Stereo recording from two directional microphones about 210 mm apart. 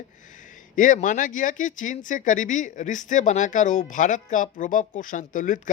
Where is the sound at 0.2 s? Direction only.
35° left (ahead or behind).